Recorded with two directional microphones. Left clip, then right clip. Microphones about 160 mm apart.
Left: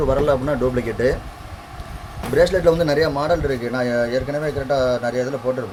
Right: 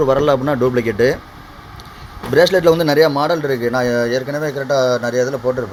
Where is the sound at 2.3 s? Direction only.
55° right (ahead or behind).